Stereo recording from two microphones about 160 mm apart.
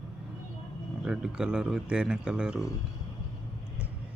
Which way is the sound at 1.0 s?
5° right (ahead or behind).